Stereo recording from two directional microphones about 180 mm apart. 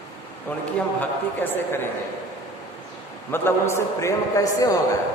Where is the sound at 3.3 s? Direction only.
10° left (ahead or behind).